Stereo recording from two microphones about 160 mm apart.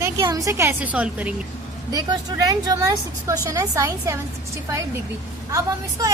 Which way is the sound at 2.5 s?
20° right (ahead or behind).